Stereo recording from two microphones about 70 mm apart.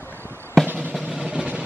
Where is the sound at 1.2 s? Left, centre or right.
Centre.